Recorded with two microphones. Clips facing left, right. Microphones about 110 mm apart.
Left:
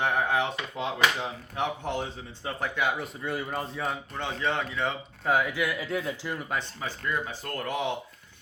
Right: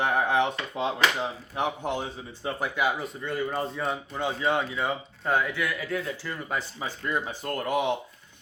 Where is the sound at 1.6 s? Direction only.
15° right (ahead or behind).